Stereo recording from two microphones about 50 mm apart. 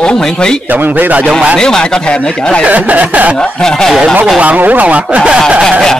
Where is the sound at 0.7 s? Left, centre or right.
Right.